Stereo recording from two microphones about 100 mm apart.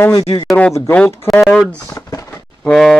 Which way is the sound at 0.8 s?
20° left (ahead or behind).